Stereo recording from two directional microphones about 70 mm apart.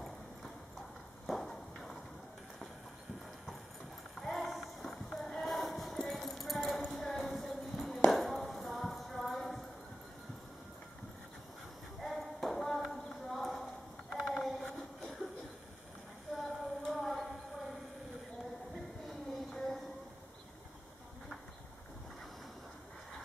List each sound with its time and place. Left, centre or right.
1.2 s clip-clop: centre
4.1 s clip-clop: centre
12.0 s clip-clop: centre
14.2 s a sound: centre
16.3 s clip-clop: centre
18.9 s music: centre